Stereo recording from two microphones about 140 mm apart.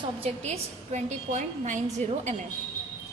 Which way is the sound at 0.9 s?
60° right (ahead or behind).